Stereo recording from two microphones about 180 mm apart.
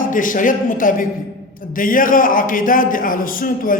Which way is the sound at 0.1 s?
45° left (ahead or behind).